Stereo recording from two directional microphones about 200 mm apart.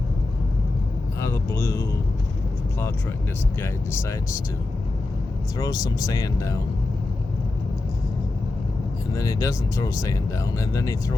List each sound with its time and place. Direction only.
1.2 s speech: 15° left (ahead or behind)
5.5 s speech: 15° left (ahead or behind)
9.1 s speech: 15° left (ahead or behind)